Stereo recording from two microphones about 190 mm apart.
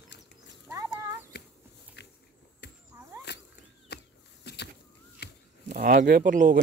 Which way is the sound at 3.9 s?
55° left (ahead or behind).